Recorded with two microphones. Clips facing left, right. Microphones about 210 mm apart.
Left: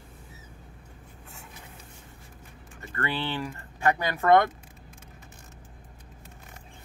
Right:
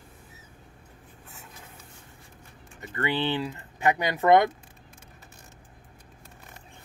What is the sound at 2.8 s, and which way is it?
Speech, 20° right (ahead or behind).